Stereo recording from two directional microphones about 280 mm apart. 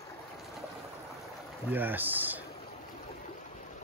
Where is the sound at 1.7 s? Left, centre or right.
Centre.